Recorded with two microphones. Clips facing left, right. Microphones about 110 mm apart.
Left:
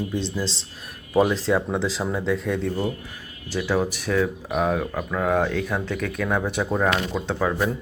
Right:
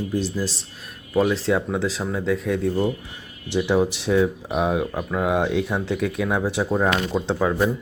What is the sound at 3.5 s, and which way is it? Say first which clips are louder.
Speech: right 3 dB; 20° right (ahead or behind).